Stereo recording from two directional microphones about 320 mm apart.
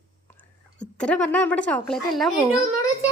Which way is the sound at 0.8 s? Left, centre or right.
Centre.